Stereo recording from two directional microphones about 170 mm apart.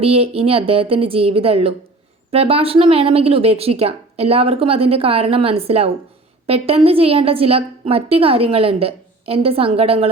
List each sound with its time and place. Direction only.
0.0 s a woman's voice: 35° right (ahead or behind)